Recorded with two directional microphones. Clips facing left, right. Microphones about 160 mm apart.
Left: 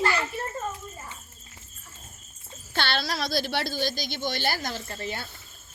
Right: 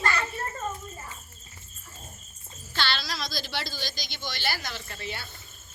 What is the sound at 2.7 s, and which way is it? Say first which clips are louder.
A woman's voice: left 3 dB; 55° left (ahead or behind).